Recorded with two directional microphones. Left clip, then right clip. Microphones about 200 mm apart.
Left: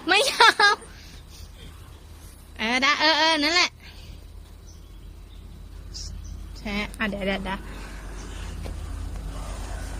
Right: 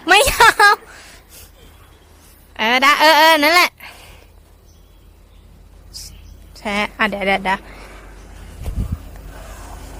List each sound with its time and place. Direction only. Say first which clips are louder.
0.0 s a sound: right 7 dB; 30° right (ahead or behind)
2.6 s speech: right 9 dB; 30° right (ahead or behind)
6.5 s a woman's voice: right 10 dB; 35° right (ahead or behind)